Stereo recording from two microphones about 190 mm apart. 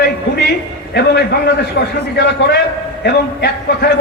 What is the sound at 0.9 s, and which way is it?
Speech, 60° left (ahead or behind).